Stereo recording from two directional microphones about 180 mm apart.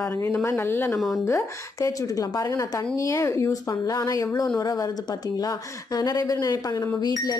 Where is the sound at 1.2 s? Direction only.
15° left (ahead or behind).